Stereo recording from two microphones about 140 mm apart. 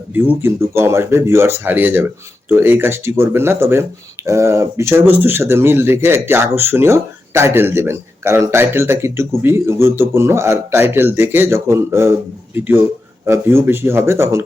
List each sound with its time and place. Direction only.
0.1 s speech: 10° right (ahead or behind)